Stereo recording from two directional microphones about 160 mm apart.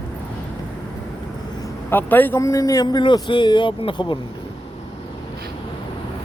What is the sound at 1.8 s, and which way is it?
A man's voice, 10° left (ahead or behind).